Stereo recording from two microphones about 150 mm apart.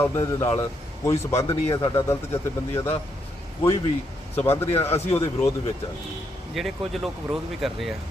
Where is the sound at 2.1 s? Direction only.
20° left (ahead or behind).